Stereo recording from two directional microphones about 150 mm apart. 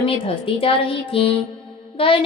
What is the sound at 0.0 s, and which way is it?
A woman's voice, 35° left (ahead or behind).